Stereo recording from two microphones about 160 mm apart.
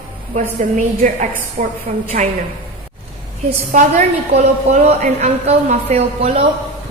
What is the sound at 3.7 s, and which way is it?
A woman's voice, 45° right (ahead or behind).